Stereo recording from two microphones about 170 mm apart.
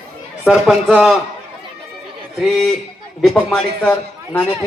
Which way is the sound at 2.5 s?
Centre (ahead or behind).